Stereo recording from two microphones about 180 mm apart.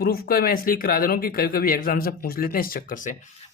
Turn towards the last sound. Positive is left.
turn(degrees=50)  # may be behind; listen again after turning